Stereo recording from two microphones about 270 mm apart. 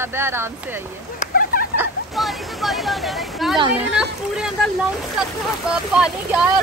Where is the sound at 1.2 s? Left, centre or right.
Left.